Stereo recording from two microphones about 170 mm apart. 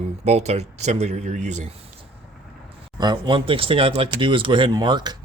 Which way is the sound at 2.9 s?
25° right (ahead or behind).